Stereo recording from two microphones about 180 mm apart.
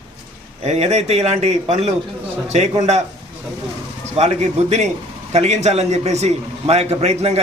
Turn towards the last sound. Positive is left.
turn(degrees=-35)  # may be behind; listen again after turning